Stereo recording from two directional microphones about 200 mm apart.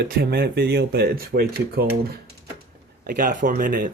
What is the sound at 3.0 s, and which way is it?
Speech, 45° right (ahead or behind).